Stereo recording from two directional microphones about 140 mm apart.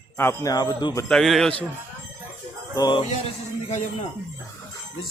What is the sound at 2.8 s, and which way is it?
Music, 30° left (ahead or behind).